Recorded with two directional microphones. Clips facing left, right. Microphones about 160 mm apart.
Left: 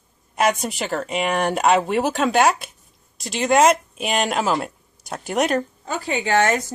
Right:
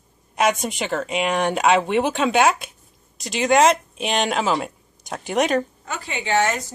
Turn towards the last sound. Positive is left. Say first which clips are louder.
# left 2 dB
turn(degrees=45)  # may be behind; listen again after turning